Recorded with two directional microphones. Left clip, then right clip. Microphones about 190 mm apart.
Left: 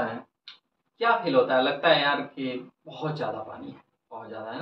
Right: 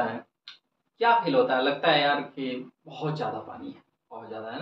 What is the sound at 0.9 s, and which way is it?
Speech, centre (ahead or behind).